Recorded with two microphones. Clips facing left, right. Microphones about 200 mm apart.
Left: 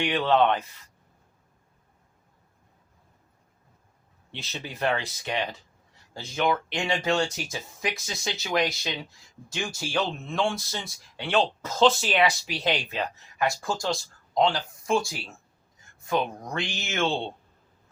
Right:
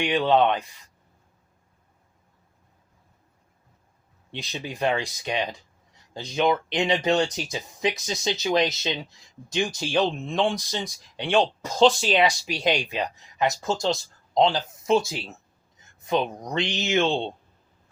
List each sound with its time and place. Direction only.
0.0 s speech: 15° right (ahead or behind)
4.3 s speech: 15° right (ahead or behind)